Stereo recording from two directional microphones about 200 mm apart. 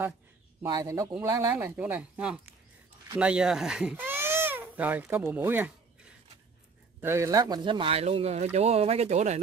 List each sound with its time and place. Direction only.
0.6 s speech: 15° right (ahead or behind); by 9.4 s 35° right (ahead or behind)